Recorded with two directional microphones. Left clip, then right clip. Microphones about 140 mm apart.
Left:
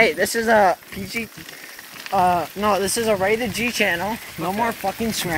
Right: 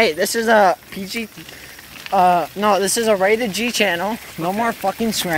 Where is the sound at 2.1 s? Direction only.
25° right (ahead or behind).